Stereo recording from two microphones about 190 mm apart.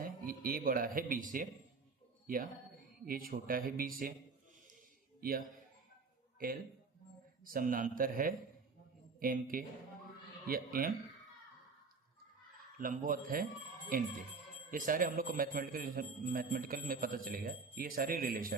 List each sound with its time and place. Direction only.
0.0 s a man's voice: 50° right (ahead or behind)
6.4 s a man's voice: 50° right (ahead or behind)
12.8 s a man's voice: 45° right (ahead or behind)